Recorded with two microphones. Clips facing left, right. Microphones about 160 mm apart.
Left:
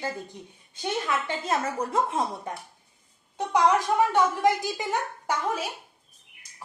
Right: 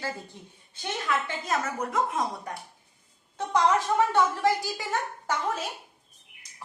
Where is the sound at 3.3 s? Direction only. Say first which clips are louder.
Left 2 dB; 15° left (ahead or behind).